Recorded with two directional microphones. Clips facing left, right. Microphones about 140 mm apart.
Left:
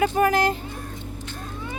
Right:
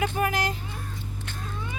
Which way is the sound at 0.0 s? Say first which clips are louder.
Left 6 dB; 40° left (ahead or behind).